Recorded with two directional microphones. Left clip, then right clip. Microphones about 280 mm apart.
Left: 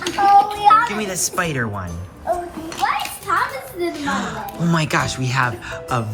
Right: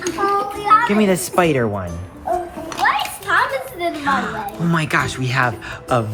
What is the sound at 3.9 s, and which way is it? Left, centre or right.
Speech, centre.